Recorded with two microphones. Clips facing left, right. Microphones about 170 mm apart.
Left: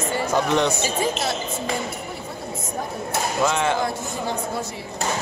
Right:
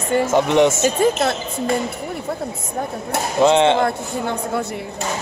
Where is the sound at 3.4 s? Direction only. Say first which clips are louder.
Right 9 dB; 30° right (ahead or behind).